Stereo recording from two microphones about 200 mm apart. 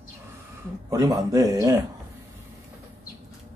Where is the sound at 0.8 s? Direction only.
20° right (ahead or behind).